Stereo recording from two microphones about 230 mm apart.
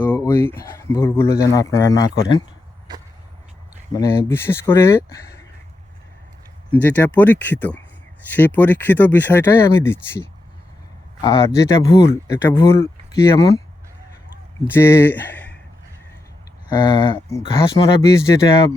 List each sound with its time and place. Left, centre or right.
0.0 s speech: centre
3.9 s speech: centre
6.7 s speech: centre
11.2 s speech: centre
14.7 s speech: centre
16.6 s speech: centre